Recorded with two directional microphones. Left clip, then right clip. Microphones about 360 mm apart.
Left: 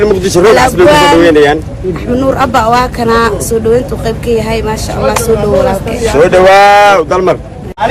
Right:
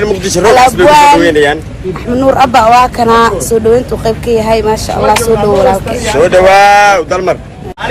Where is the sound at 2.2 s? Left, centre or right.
Centre.